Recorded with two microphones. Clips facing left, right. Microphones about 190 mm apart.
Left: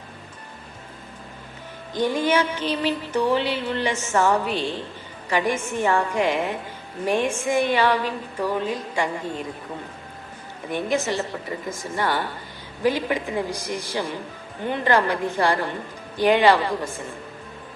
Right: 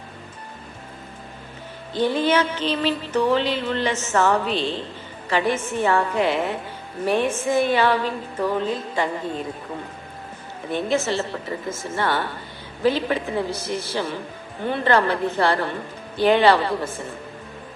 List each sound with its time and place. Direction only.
1.9 s music: 15° left (ahead or behind)
10.7 s music: 15° left (ahead or behind)